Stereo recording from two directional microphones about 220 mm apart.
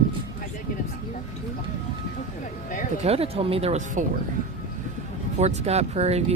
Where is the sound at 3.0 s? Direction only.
25° right (ahead or behind).